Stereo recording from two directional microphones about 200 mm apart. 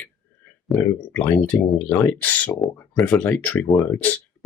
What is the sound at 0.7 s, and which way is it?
Speech, 10° left (ahead or behind).